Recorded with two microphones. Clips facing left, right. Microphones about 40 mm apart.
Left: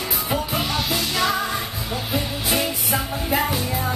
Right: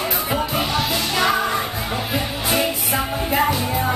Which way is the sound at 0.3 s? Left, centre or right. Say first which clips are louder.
Right 1 dB; centre.